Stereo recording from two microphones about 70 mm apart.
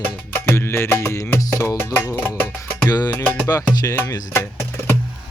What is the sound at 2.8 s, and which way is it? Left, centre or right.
Music, left.